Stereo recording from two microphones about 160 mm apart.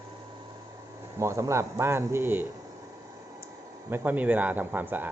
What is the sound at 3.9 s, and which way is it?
A man's voice, 10° right (ahead or behind).